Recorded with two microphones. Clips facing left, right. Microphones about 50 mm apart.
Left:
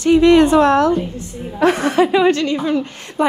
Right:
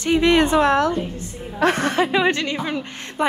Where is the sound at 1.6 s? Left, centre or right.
Right.